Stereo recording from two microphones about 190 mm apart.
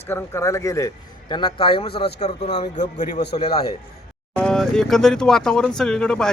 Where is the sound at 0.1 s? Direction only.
15° left (ahead or behind).